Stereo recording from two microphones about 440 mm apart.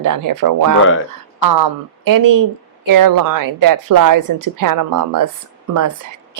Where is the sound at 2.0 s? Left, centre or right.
Right.